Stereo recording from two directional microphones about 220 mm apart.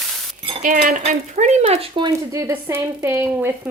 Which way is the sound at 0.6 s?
35° right (ahead or behind).